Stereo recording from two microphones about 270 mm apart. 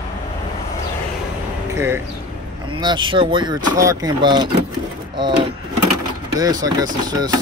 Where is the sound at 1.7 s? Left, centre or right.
Centre.